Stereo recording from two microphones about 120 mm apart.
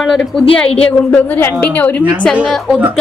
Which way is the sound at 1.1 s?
15° left (ahead or behind).